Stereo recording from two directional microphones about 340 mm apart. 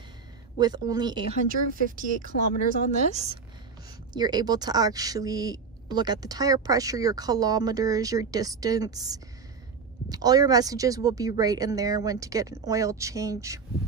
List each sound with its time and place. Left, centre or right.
0.6 s speech: centre
1.5 s speech: right